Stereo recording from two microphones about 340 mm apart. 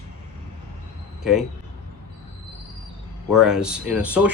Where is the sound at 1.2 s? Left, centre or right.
Centre.